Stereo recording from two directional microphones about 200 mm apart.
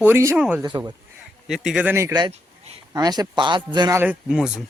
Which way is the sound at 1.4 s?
Centre (ahead or behind).